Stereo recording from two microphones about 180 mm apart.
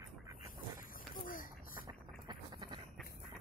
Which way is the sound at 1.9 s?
25° right (ahead or behind).